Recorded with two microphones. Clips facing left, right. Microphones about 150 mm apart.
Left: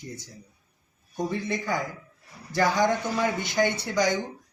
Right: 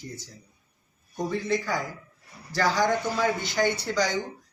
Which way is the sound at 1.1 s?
20° left (ahead or behind).